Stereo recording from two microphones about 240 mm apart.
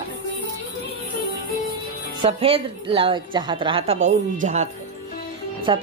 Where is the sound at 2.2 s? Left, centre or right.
Right.